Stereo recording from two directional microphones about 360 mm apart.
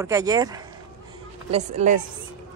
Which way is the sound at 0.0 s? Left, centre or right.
Centre.